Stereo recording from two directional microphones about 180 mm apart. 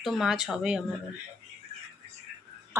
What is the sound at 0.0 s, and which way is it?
Speech, centre (ahead or behind).